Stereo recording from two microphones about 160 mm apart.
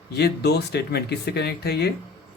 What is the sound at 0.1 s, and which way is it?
Speech, 90° left.